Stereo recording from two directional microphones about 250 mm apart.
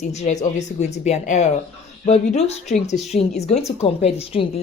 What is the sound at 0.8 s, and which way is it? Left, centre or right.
Speech, left.